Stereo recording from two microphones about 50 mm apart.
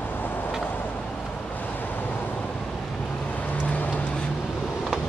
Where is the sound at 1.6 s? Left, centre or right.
Left.